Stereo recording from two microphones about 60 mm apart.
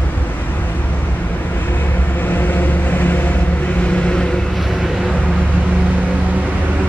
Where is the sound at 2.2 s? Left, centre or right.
Left.